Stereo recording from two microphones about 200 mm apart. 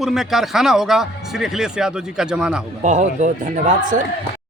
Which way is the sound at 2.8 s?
40° right (ahead or behind).